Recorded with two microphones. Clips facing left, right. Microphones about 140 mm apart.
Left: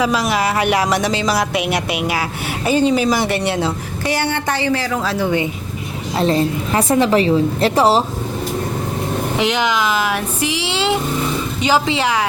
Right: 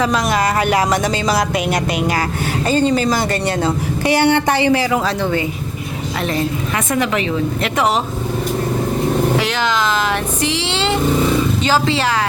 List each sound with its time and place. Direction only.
0.0 s speech: 5° left (ahead or behind)
4.2 s speech: 15° right (ahead or behind)
5.0 s speech: 10° left (ahead or behind)
6.1 s a woman's voice: 30° left (ahead or behind)
9.4 s speech: 15° left (ahead or behind)